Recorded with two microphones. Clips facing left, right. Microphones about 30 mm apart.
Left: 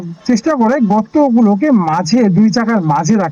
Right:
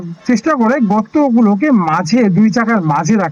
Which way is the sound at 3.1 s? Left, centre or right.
Centre.